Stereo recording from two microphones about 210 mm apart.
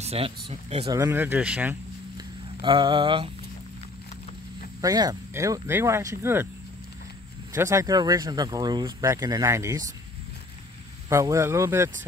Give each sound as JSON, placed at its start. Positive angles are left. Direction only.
{"t": 0.0, "sound": "speech", "side_deg": -30}
{"t": 0.8, "sound": "speech", "side_deg": -15}
{"t": 2.6, "sound": "speech", "side_deg": -20}
{"t": 4.8, "sound": "speech", "side_deg": -15}
{"t": 7.5, "sound": "speech", "side_deg": -15}
{"t": 11.1, "sound": "speech", "side_deg": -15}